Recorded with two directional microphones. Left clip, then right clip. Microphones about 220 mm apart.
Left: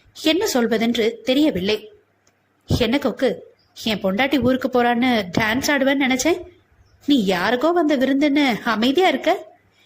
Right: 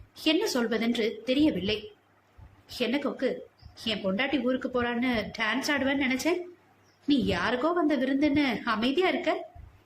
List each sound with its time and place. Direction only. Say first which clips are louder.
0.1 s a woman's voice: left 7 dB; 25° left (ahead or behind)